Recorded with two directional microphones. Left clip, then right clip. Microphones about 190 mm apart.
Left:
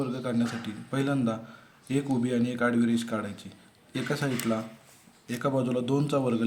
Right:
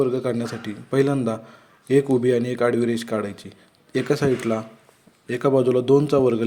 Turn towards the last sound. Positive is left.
turn(degrees=-30)  # may be behind; listen again after turning